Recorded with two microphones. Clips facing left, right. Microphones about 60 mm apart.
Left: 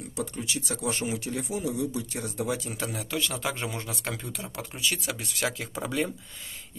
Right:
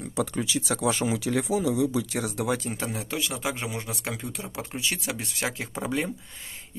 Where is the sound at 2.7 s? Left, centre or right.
Right.